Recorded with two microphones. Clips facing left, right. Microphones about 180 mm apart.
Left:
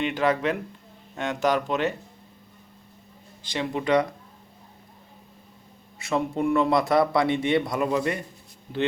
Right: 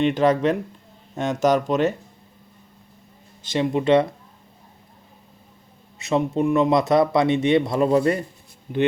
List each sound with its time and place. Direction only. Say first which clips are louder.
0.0 s speech: right 5 dB; 35° right (ahead or behind)
3.4 s speech: right 6 dB; 20° right (ahead or behind)
6.0 s speech: right 4 dB; 20° right (ahead or behind)